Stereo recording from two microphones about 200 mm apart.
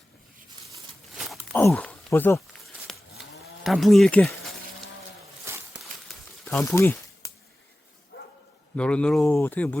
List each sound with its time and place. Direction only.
1.1 s a sound: centre (ahead or behind)
1.7 s cattle: 5° left (ahead or behind)
5.5 s a sound: 15° right (ahead or behind)
6.5 s speech: 10° left (ahead or behind)
8.1 s bow-wow: 65° left (ahead or behind)
8.7 s speech: 5° left (ahead or behind)